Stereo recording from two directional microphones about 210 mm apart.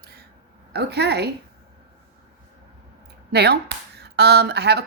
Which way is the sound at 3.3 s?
50° right (ahead or behind).